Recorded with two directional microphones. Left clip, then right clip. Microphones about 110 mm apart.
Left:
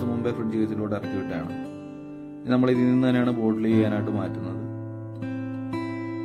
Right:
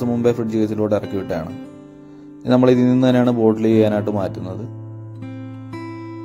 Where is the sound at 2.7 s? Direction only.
40° right (ahead or behind).